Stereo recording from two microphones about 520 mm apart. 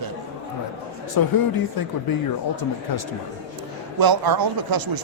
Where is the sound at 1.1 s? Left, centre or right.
Left.